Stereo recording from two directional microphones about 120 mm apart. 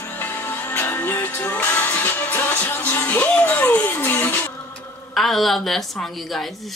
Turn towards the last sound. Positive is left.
turn(degrees=0)  # may be behind; listen again after turning